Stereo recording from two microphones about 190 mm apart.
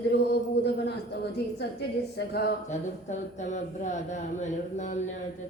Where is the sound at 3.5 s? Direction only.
40° left (ahead or behind).